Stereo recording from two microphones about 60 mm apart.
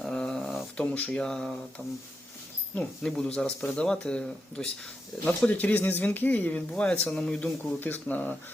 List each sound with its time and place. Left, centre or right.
0.0 s a sound: centre
1.0 s speech: centre
3.0 s speech: centre
3.2 s speech: left
6.8 s speech: centre
7.7 s speech: left